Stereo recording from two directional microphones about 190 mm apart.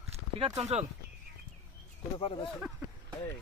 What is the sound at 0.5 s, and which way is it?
Speech, 35° right (ahead or behind).